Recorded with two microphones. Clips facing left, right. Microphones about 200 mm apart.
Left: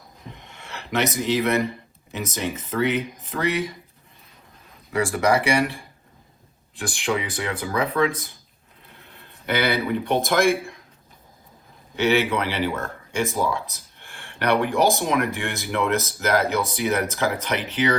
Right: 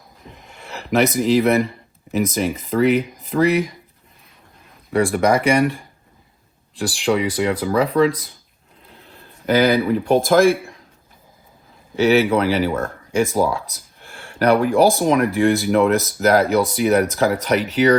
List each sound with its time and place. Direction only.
0.3 s a sound: centre (ahead or behind)
0.5 s a sound: 35° right (ahead or behind)
1.2 s speech: 35° right (ahead or behind)
6.7 s speech: 35° right (ahead or behind)
9.5 s speech: 35° right (ahead or behind)
11.9 s speech: 35° right (ahead or behind)